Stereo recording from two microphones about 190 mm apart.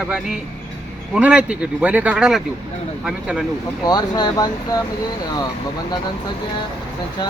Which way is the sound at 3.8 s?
20° left (ahead or behind).